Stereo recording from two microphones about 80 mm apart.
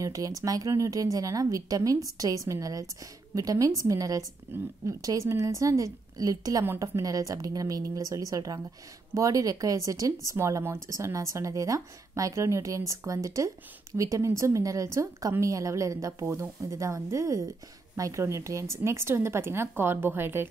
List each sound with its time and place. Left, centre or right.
0.0 s a woman's voice: right
4.5 s a woman's voice: right
4.8 s a woman's voice: right